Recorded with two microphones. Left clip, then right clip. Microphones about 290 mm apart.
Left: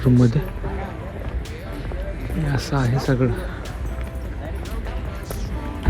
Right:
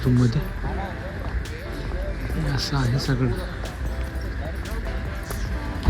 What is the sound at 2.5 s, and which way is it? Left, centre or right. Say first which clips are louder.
Speech: left 3 dB; centre.